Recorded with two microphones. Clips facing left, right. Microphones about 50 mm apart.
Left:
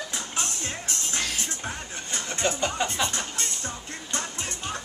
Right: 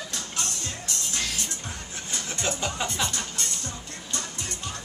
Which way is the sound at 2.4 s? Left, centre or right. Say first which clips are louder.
Left 3 dB; centre.